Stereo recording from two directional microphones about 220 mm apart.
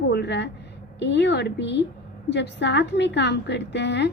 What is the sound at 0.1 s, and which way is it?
A woman's voice, 50° left (ahead or behind).